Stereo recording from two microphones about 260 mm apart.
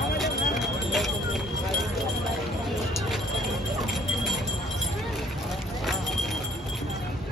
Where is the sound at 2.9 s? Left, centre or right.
Centre.